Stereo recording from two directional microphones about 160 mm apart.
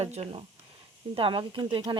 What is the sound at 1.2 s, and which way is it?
Speech, 30° right (ahead or behind).